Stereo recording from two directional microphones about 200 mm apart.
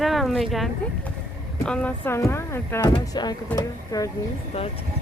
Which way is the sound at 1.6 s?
5° left (ahead or behind).